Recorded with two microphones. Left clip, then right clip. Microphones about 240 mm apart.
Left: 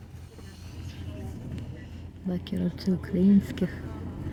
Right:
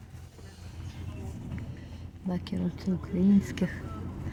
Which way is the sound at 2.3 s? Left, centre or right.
Centre.